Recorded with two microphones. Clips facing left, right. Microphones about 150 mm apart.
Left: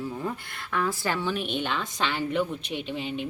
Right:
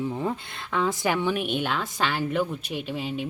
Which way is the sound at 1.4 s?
5° right (ahead or behind).